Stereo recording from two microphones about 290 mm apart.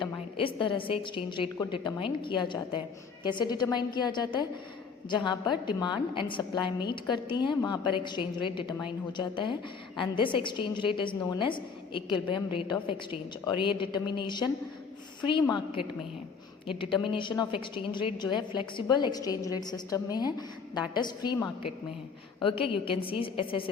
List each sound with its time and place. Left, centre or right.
0.0 s a woman's voice: centre